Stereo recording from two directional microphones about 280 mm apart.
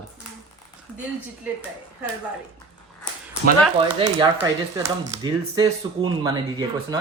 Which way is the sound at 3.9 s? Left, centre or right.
Centre.